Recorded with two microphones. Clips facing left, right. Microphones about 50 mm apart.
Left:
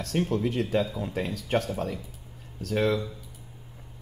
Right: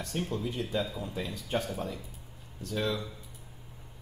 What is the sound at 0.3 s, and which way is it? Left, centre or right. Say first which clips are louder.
Speech: left 7 dB; left.